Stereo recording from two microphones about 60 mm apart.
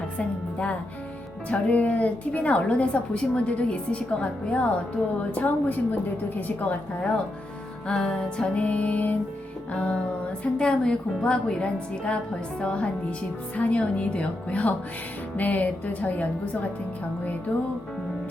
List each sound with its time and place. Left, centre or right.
0.2 s a woman's voice: left
7.9 s a woman's voice: centre
8.5 s a woman's voice: left